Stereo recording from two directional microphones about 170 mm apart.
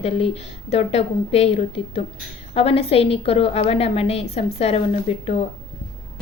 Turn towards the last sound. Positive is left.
turn(degrees=40)  # may be behind; listen again after turning